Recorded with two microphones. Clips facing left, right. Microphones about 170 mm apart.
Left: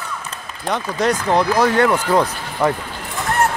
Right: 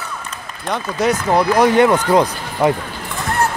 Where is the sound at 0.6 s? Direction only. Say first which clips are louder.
Right 1 dB; 5° right (ahead or behind).